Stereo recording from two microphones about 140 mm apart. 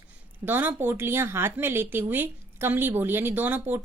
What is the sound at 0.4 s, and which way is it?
A woman's voice, 15° right (ahead or behind).